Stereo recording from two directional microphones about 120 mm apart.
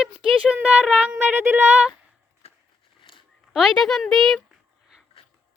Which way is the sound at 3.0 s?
45° left (ahead or behind).